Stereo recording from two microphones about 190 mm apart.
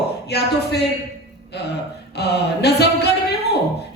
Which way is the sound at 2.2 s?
60° left (ahead or behind).